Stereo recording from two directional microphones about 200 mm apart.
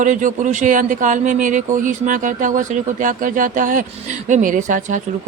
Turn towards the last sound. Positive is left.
turn(degrees=-40)  # may be behind; listen again after turning